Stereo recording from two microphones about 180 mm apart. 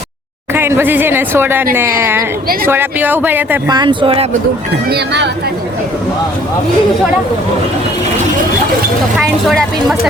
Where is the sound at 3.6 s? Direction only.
25° right (ahead or behind).